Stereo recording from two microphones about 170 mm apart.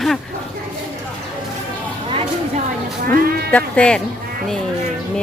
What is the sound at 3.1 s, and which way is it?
Sheep, 60° right (ahead or behind).